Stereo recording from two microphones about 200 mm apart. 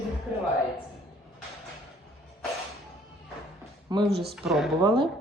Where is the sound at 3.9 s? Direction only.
20° right (ahead or behind).